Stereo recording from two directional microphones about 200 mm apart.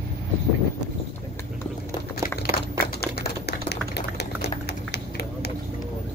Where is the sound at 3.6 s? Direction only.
55° left (ahead or behind).